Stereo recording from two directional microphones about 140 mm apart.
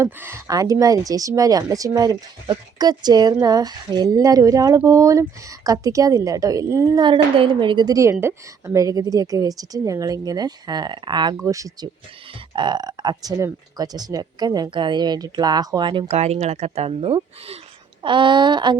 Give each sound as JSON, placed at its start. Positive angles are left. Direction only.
{"t": 0.0, "sound": "a woman's voice", "side_deg": -20}
{"t": 7.0, "sound": "a woman's voice", "side_deg": -35}
{"t": 16.0, "sound": "speech", "side_deg": -50}
{"t": 18.0, "sound": "a woman's voice", "side_deg": -35}